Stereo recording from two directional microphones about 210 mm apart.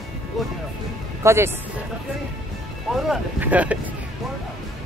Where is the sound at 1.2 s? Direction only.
15° right (ahead or behind).